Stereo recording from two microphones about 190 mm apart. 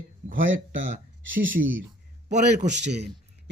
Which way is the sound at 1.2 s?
85° right.